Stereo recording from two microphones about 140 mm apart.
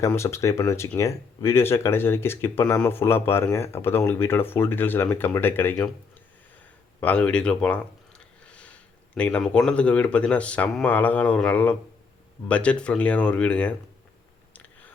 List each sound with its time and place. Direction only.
0.1 s speech: 20° left (ahead or behind)
7.0 s speech: 10° left (ahead or behind)
14.5 s a sound: 10° left (ahead or behind)